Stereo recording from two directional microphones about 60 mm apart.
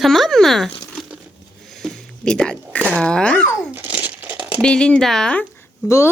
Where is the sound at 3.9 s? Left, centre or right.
Right.